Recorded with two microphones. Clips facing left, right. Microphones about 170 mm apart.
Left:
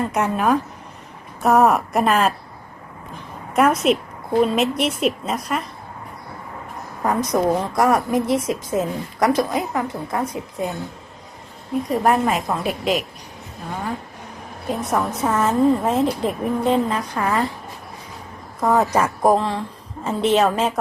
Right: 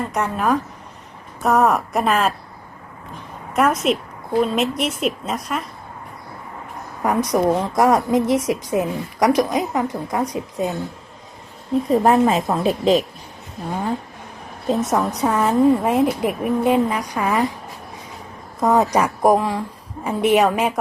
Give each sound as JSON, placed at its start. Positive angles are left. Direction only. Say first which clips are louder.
{"t": 0.1, "sound": "a woman's voice", "louder": "left 1 dB", "side_deg": 0}
{"t": 3.5, "sound": "a woman's voice", "louder": "left 1 dB", "side_deg": 0}
{"t": 7.0, "sound": "a woman's voice", "louder": "right 1 dB", "side_deg": -15}
{"t": 12.0, "sound": "a woman's voice", "louder": "right 1 dB", "side_deg": -25}
{"t": 14.7, "sound": "a woman's voice", "louder": "right 3 dB", "side_deg": -20}
{"t": 18.6, "sound": "a woman's voice", "louder": "right 1 dB", "side_deg": -20}